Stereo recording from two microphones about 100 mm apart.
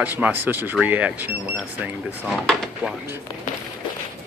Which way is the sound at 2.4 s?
5° left (ahead or behind).